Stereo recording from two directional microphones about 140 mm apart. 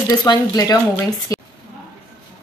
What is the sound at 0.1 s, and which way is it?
Speech, 30° left (ahead or behind).